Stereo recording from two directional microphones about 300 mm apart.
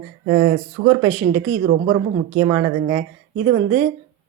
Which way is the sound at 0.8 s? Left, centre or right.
Right.